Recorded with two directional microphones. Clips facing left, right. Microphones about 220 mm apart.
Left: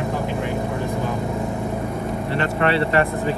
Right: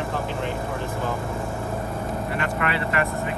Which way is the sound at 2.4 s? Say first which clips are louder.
Left 9 dB; 30° left (ahead or behind).